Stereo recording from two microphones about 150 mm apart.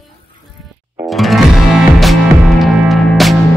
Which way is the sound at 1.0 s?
Centre (ahead or behind).